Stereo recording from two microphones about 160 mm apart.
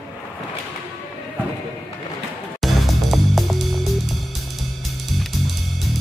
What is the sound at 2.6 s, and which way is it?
Music, centre (ahead or behind).